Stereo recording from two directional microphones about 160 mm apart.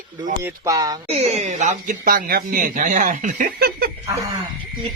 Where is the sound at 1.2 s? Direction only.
45° right (ahead or behind).